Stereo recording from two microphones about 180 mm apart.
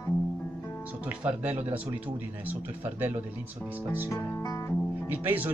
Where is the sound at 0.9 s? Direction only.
10° right (ahead or behind).